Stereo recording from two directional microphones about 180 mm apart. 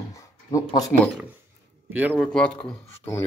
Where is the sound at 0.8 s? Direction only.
Centre (ahead or behind).